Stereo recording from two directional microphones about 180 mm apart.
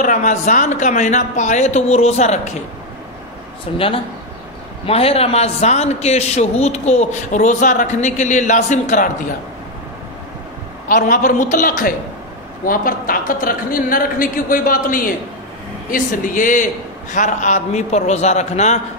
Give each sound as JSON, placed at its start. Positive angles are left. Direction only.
{"t": 0.0, "sound": "a man's voice", "side_deg": 40}
{"t": 3.7, "sound": "a man's voice", "side_deg": 30}
{"t": 10.9, "sound": "a woman's voice", "side_deg": 50}